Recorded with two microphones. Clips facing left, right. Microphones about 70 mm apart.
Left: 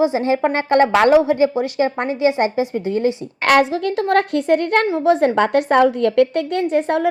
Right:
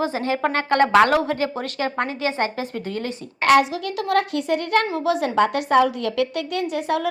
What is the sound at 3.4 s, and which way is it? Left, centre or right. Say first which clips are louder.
A woman's voice: left 2 dB; left.